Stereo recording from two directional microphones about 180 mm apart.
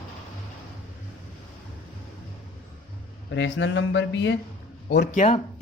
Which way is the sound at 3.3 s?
90° left.